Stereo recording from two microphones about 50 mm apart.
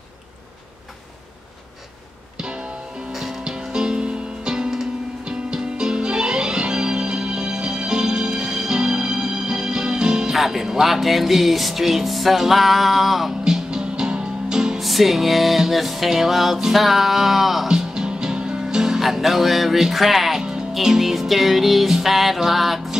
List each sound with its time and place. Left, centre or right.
2.3 s music: centre
13.4 s music: centre
14.8 s music: centre
17.6 s speech: centre